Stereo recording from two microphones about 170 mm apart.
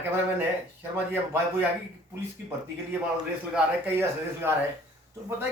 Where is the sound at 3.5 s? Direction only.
10° right (ahead or behind).